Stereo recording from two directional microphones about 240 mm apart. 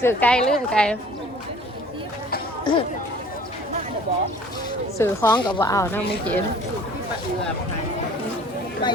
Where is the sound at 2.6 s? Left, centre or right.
Centre.